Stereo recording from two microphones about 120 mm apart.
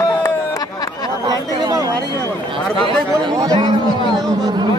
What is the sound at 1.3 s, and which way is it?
Chatter, 30° right (ahead or behind).